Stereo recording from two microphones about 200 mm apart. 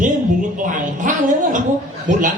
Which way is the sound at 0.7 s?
40° right (ahead or behind).